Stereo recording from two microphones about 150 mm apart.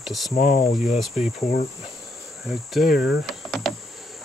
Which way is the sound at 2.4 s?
Centre (ahead or behind).